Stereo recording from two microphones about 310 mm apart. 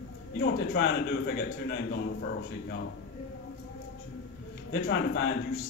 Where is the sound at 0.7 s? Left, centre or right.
Left.